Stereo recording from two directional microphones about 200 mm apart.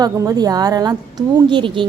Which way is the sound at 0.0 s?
20° right (ahead or behind).